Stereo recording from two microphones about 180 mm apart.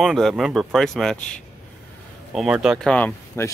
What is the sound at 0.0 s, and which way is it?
Speech, centre (ahead or behind).